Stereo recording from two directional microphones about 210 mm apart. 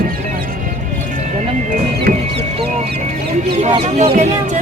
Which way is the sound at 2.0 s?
50° right (ahead or behind).